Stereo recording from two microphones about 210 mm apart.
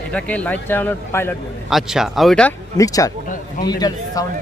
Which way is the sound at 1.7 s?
Centre (ahead or behind).